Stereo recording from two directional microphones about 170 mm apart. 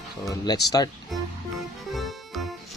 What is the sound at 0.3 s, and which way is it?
Speech, 20° left (ahead or behind).